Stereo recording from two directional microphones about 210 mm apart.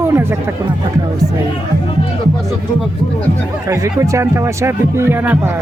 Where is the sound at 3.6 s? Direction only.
15° right (ahead or behind).